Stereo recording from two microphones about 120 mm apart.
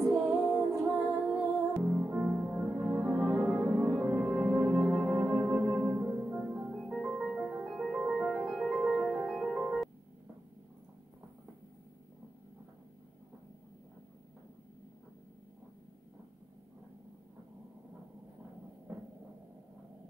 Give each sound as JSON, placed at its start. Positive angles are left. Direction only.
{"t": 0.0, "sound": "music", "side_deg": -5}
{"t": 5.8, "sound": "music", "side_deg": -20}
{"t": 6.0, "sound": "music", "side_deg": -5}